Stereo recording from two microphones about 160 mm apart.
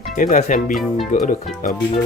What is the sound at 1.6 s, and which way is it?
Speech, 60° left (ahead or behind).